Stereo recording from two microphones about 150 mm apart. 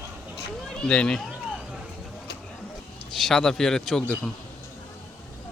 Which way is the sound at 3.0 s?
Centre (ahead or behind).